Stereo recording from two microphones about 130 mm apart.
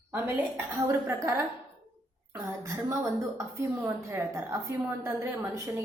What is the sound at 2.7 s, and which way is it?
A woman's voice, 25° right (ahead or behind).